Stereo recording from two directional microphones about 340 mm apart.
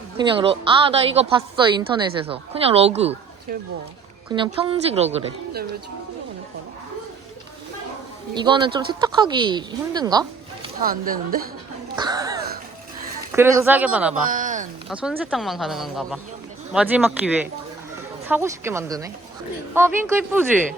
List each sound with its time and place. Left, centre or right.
0.2 s speech: centre
8.4 s speech: centre
10.8 s a woman's voice: right
11.9 s a sound: centre
13.3 s speech: centre
14.3 s speech: right
14.8 s speech: centre